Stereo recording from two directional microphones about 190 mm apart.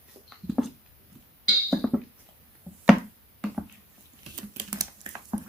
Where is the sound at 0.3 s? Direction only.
Centre (ahead or behind).